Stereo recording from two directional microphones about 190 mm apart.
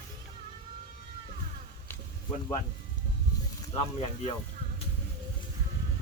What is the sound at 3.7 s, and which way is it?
Speech, 30° left (ahead or behind).